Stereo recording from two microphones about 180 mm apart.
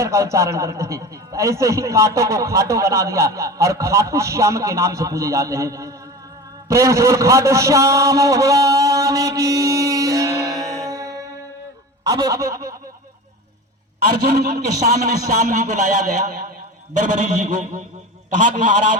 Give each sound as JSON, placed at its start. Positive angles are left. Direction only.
{"t": 0.0, "sound": "a man's voice", "side_deg": -15}
{"t": 10.4, "sound": "music", "side_deg": 0}
{"t": 10.8, "sound": "music", "side_deg": -20}
{"t": 12.0, "sound": "a man's voice", "side_deg": -20}
{"t": 15.3, "sound": "a man's voice", "side_deg": -45}